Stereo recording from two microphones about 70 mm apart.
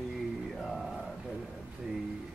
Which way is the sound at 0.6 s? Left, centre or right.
Centre.